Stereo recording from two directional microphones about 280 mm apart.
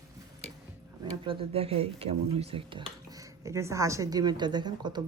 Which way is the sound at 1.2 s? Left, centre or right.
Centre.